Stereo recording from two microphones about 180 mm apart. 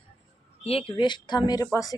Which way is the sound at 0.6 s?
35° left (ahead or behind).